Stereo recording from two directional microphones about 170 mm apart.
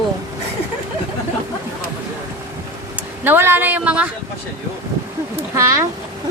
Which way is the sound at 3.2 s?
10° right (ahead or behind).